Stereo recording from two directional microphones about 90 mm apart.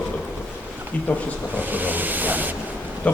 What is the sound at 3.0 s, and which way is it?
Speech, 20° left (ahead or behind).